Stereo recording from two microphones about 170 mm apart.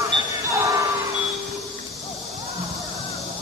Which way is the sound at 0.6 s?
20° right (ahead or behind).